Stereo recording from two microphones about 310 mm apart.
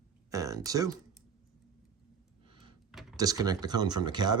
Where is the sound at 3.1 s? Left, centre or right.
Centre.